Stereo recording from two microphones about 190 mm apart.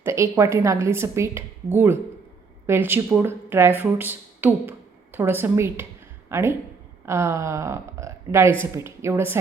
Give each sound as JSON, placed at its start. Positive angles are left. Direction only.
{"t": 0.0, "sound": "speech", "side_deg": -15}